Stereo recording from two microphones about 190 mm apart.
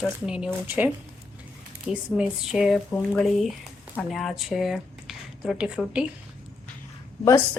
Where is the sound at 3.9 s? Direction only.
Centre (ahead or behind).